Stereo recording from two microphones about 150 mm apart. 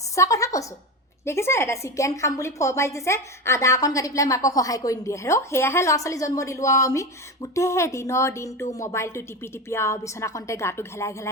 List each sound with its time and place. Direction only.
0.2 s a woman's voice: 20° left (ahead or behind)